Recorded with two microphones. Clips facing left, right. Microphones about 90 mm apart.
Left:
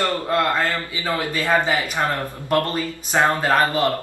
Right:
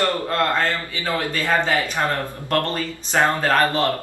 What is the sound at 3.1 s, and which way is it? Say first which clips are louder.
Speech: even; 15° left (ahead or behind).